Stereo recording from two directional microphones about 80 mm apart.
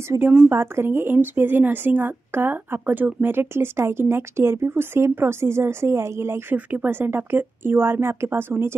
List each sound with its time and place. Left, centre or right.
0.2 s speech: centre
0.5 s speech: right
6.5 s speech: right